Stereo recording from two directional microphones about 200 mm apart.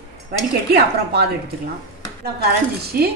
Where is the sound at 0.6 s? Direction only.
50° right (ahead or behind).